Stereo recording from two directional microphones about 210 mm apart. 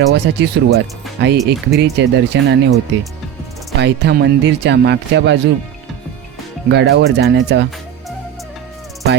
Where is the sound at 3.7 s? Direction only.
50° right (ahead or behind).